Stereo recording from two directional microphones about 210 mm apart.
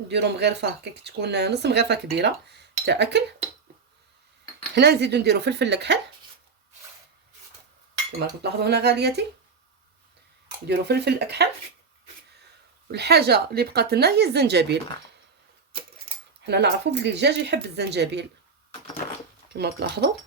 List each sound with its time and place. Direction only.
0.1 s speech: 55° right (ahead or behind)
4.7 s speech: 55° right (ahead or behind)
8.4 s speech: 50° right (ahead or behind)
10.7 s speech: 50° right (ahead or behind)
12.9 s speech: 50° right (ahead or behind)
16.4 s speech: 55° right (ahead or behind)
19.5 s speech: 50° right (ahead or behind)